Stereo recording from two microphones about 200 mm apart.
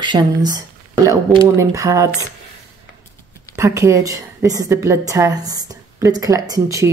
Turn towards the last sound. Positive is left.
turn(degrees=-15)  # may be behind; listen again after turning